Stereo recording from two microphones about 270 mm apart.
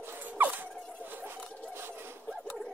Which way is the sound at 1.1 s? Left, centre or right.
Centre.